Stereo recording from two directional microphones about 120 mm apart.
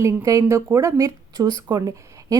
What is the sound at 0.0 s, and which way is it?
A woman's voice, 25° right (ahead or behind).